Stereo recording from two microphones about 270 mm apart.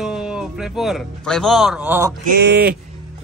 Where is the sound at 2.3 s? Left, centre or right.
Right.